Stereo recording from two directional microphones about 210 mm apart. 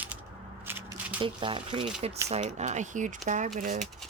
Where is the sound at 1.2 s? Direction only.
25° right (ahead or behind).